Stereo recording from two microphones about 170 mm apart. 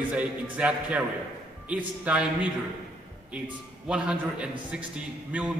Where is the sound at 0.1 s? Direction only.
10° right (ahead or behind).